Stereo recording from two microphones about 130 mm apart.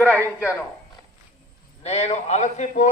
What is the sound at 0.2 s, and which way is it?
Speech, 10° right (ahead or behind).